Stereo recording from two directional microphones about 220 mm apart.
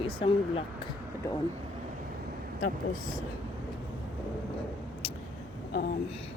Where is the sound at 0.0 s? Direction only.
25° left (ahead or behind).